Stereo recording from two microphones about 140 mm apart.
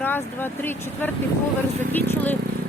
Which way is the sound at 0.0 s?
15° left (ahead or behind).